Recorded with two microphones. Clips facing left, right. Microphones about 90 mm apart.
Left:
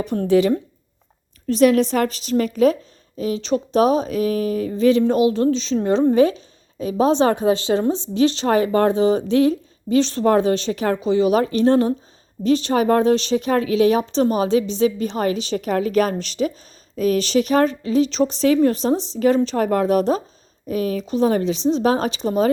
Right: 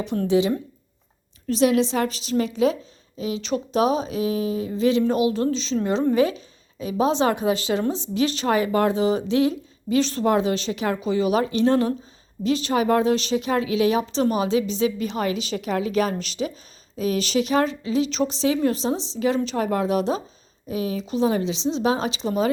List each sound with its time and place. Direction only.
0.3 s speech: 55° left (ahead or behind)
4.7 s speech: 40° left (ahead or behind)
6.1 s a sound: 35° left (ahead or behind)
7.0 s speech: 40° left (ahead or behind)